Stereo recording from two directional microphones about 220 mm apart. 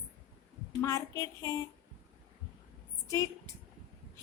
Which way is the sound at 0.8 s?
15° left (ahead or behind).